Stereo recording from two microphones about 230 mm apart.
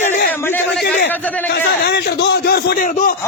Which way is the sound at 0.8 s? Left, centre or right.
Left.